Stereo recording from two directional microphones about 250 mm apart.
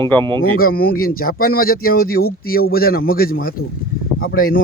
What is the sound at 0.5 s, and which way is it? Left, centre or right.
Speech, left.